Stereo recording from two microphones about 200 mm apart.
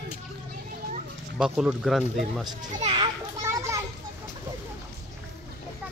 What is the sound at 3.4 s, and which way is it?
Children playing, 15° right (ahead or behind).